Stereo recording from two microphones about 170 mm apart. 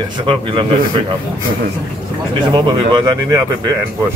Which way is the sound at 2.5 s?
25° right (ahead or behind).